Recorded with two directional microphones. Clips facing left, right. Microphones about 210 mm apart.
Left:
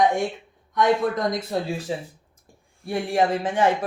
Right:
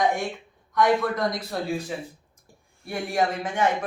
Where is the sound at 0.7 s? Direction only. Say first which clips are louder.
Left 1 dB; 20° left (ahead or behind).